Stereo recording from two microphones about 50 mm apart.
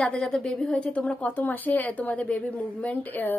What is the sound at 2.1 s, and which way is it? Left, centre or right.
Speech, left.